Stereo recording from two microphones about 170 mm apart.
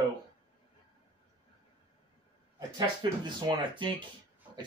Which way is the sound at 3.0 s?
25° right (ahead or behind).